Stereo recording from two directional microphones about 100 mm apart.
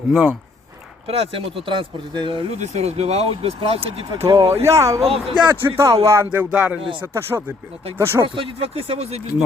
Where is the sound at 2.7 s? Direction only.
90° right; by 4.1 s 75° right (ahead or behind).